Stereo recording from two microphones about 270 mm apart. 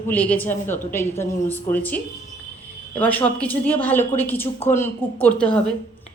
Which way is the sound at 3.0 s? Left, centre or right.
Centre.